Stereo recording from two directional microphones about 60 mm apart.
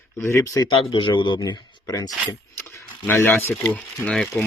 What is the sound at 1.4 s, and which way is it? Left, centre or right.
Speech, left.